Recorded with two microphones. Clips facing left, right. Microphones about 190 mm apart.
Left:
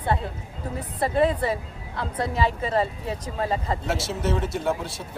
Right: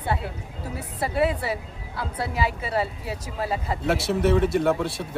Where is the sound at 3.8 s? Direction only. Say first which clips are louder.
Right 5 dB; 60° right (ahead or behind).